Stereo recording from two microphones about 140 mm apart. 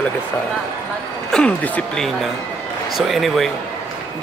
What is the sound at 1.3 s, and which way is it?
A man's voice, 10° left (ahead or behind).